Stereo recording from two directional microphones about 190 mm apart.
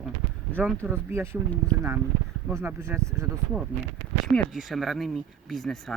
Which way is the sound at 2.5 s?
15° right (ahead or behind).